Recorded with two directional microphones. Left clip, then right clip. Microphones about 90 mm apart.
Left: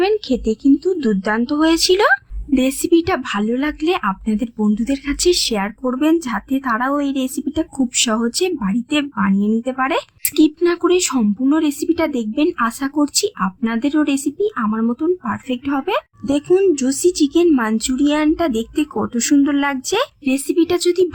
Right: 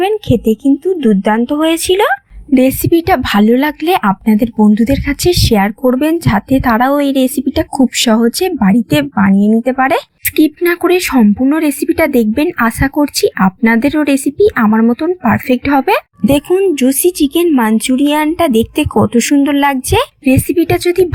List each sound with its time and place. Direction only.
0.0 s a woman's voice: 30° right (ahead or behind)
0.9 s a woman's voice: 15° right (ahead or behind)
1.5 s a woman's voice: 30° right (ahead or behind)
3.2 s a woman's voice: 55° right (ahead or behind); by 11.2 s 40° right (ahead or behind)
11.2 s a woman's voice: 25° right (ahead or behind)
11.5 s a woman's voice: 50° right (ahead or behind); by 14.8 s 65° right (ahead or behind)
15.0 s a woman's voice: 55° right (ahead or behind)
16.5 s a woman's voice: 10° right (ahead or behind)
16.7 s a woman's voice: 35° right (ahead or behind)